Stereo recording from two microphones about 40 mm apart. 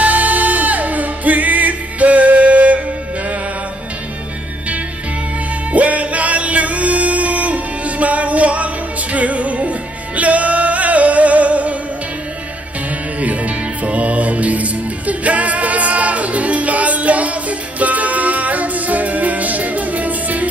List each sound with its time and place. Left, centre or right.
0.0 s music: right
5.7 s music: right
13.2 s music: right